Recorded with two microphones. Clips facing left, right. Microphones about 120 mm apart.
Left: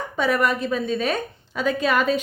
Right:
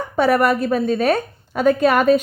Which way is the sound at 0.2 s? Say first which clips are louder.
Right 6 dB; 50° right (ahead or behind).